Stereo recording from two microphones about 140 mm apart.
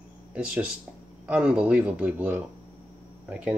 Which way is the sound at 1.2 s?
10° right (ahead or behind).